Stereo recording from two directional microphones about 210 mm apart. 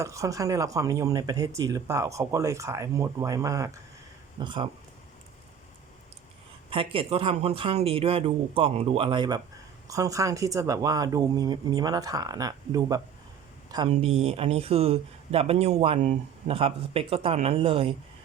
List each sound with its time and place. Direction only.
0.0 s speech: 15° right (ahead or behind)
6.7 s speech: 25° right (ahead or behind)